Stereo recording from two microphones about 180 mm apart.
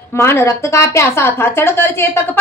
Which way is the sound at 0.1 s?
15° left (ahead or behind).